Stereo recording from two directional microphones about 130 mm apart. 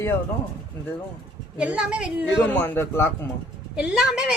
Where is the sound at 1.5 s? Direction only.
10° right (ahead or behind).